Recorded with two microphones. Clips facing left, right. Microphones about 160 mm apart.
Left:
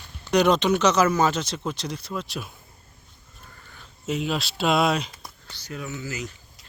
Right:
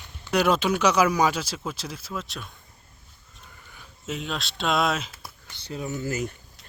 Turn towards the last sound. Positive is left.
turn(degrees=-50)  # may be behind; listen again after turning